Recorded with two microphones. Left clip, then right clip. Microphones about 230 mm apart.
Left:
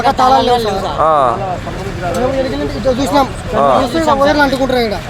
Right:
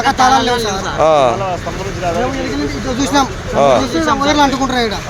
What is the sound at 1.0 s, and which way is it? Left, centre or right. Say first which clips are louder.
Speech: right 1 dB; right.